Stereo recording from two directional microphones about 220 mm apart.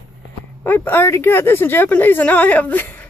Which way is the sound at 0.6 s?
10° left (ahead or behind).